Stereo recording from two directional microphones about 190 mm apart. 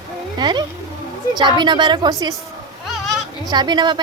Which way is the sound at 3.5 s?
25° right (ahead or behind).